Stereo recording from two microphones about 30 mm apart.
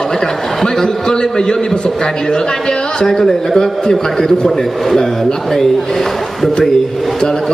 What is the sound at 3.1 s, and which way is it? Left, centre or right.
A man's voice, centre.